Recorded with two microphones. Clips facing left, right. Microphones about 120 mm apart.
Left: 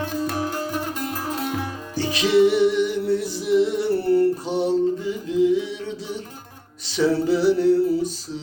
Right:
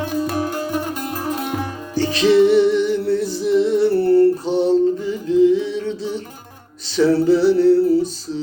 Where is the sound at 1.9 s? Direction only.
10° left (ahead or behind).